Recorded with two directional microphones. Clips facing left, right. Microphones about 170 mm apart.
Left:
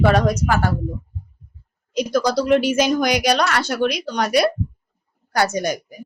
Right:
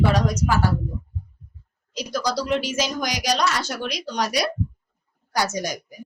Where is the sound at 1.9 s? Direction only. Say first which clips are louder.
Left 7 dB; 55° left (ahead or behind).